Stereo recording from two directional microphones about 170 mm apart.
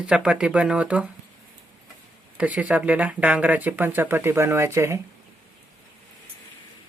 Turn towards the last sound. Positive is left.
turn(degrees=-15)  # may be behind; listen again after turning